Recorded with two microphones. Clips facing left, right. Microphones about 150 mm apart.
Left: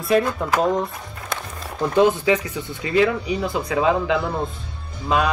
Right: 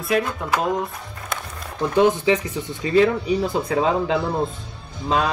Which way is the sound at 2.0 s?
20° right (ahead or behind).